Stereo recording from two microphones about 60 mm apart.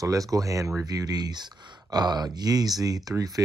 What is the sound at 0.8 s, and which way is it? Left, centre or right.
Speech, right.